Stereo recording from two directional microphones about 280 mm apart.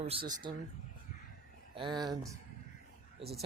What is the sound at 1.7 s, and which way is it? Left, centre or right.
Speech, centre.